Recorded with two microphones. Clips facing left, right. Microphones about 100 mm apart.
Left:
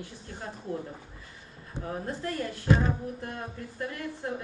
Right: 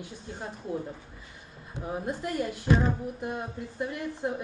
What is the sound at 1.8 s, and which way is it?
A woman's voice, 15° right (ahead or behind).